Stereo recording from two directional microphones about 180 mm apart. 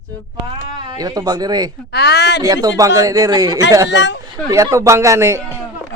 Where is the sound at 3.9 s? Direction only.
75° left (ahead or behind).